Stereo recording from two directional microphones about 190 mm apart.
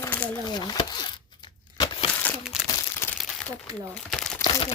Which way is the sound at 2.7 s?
20° left (ahead or behind).